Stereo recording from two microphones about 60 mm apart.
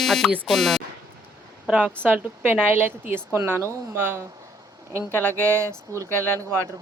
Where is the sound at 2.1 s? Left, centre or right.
Right.